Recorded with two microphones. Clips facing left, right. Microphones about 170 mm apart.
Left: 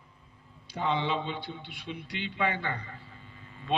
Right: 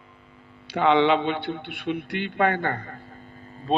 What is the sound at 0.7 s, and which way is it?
A man's voice, 75° right (ahead or behind).